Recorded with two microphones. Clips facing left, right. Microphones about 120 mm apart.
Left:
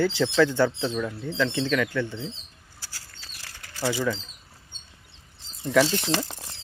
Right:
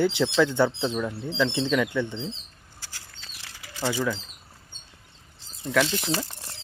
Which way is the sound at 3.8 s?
20° right (ahead or behind).